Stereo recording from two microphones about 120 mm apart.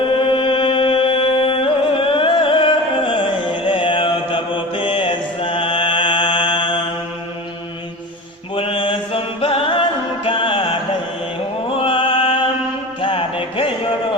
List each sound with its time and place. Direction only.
0.1 s music: 50° left (ahead or behind)
8.5 s chant: 50° left (ahead or behind)
10.2 s music: 45° left (ahead or behind)